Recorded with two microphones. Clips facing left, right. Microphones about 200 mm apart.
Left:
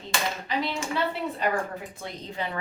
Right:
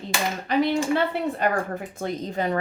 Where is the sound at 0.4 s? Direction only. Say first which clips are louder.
Right 8 dB; 55° right (ahead or behind).